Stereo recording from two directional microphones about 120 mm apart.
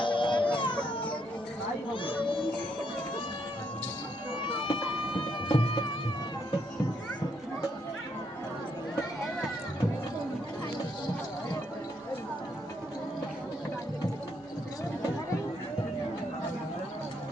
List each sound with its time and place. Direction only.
0.0 s music: 45° left (ahead or behind)
1.9 s children playing: 45° left (ahead or behind)
4.7 s music: 45° left (ahead or behind)